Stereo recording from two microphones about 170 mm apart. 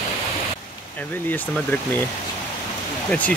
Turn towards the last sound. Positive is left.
turn(degrees=10)  # may be behind; listen again after turning